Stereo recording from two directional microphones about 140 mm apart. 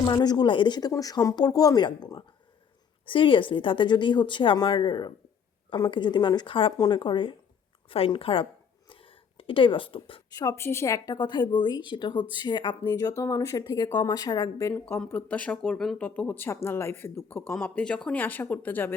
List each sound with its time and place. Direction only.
0.0 s a woman's voice: 30° left (ahead or behind)
8.9 s a sound: 40° left (ahead or behind)
10.2 s speech: 25° left (ahead or behind)
14.7 s speech: 15° left (ahead or behind)